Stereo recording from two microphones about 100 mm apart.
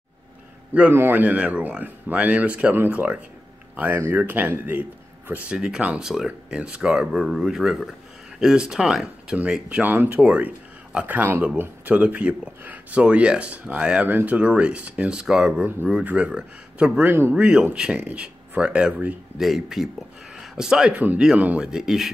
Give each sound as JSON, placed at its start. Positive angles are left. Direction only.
{"t": 0.7, "sound": "speech", "side_deg": -20}